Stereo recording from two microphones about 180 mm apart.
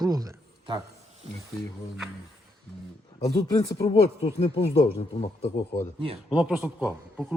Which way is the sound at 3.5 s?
20° left (ahead or behind).